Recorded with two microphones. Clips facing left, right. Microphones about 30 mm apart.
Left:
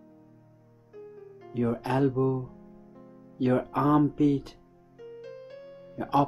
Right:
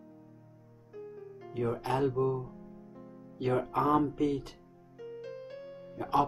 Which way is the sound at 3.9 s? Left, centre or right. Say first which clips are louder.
Left 6 dB; centre.